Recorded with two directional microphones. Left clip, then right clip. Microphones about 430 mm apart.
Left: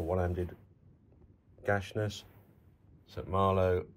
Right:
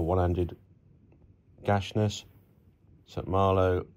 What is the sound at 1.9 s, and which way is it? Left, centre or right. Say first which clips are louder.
Speech: right 6 dB; left.